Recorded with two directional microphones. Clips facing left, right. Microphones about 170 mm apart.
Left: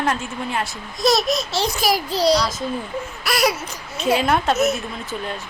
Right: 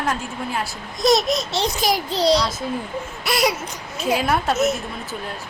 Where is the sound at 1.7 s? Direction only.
20° right (ahead or behind).